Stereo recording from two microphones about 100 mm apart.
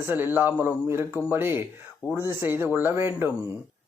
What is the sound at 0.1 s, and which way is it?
Speech, 20° right (ahead or behind).